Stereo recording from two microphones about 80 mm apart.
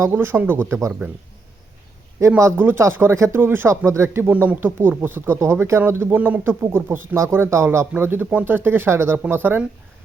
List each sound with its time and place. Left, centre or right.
0.1 s speech: right
2.4 s speech: right
4.3 s speech: right